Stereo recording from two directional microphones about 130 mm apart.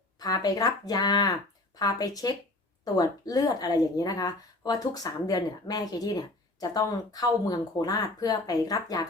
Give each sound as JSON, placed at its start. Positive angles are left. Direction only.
{"t": 0.2, "sound": "a woman's voice", "side_deg": 30}